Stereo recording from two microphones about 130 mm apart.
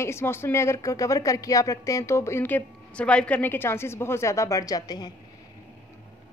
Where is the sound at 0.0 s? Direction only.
20° left (ahead or behind).